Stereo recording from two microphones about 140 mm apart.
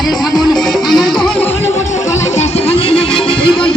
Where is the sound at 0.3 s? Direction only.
5° left (ahead or behind).